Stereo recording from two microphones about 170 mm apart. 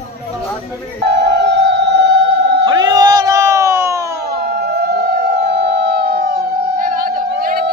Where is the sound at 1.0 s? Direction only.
75° right (ahead or behind).